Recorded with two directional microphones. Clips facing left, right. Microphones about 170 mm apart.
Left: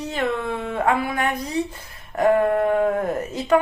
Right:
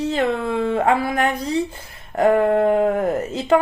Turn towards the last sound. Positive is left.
turn(degrees=-25)  # may be behind; listen again after turning